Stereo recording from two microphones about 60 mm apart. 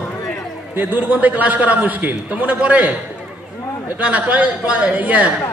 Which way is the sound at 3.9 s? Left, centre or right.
Right.